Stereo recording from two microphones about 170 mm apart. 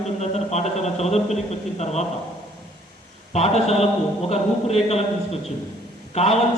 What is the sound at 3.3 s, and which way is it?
A man's voice, 40° left (ahead or behind).